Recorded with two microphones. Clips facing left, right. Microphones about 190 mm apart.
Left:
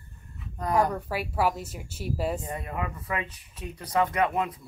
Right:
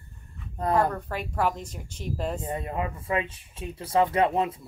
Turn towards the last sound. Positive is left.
turn(degrees=-25)  # may be behind; listen again after turning